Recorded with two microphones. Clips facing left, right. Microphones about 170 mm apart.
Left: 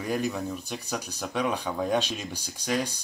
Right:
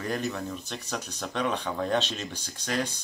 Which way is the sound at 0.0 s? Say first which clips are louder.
Left 2 dB; 10° left (ahead or behind).